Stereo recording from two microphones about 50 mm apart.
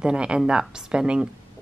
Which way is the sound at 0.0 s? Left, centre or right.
Centre.